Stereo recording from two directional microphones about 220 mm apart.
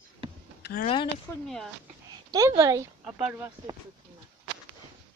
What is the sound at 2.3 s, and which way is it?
Speech, 15° right (ahead or behind).